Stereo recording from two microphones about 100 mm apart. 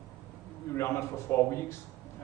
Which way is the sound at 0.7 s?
25° left (ahead or behind).